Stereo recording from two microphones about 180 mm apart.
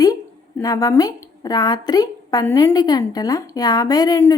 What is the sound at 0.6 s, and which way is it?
A woman's voice, 20° left (ahead or behind).